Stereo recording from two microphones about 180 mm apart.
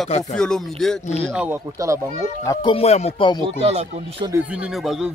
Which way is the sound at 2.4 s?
25° left (ahead or behind).